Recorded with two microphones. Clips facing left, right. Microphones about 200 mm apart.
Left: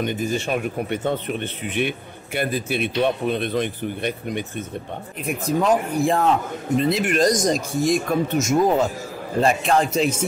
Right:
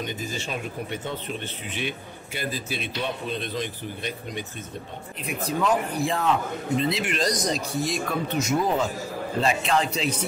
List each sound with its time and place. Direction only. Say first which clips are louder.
0.0 s speech: left 8 dB; 60° left (ahead or behind)
5.2 s speech: left 5 dB; 50° left (ahead or behind)